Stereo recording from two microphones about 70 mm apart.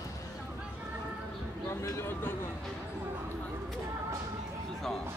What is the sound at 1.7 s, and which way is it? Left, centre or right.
Speech, left.